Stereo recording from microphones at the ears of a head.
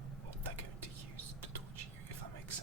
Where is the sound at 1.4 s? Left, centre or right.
Right.